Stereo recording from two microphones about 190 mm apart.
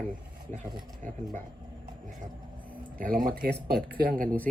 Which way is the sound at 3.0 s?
50° right (ahead or behind).